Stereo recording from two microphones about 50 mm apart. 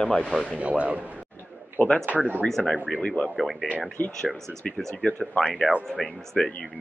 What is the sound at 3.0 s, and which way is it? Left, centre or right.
Speech, left.